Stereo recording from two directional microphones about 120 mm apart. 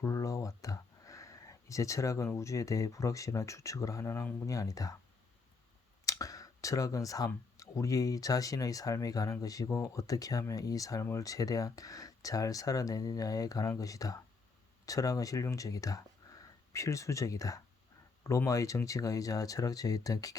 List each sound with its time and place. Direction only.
0.0 s speech: 25° left (ahead or behind)
6.1 s speech: 30° left (ahead or behind)